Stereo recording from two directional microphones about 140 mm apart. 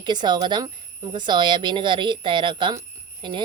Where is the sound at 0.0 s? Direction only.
30° right (ahead or behind).